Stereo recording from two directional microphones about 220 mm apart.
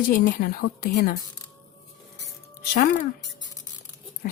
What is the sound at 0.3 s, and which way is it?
Speech, 45° left (ahead or behind).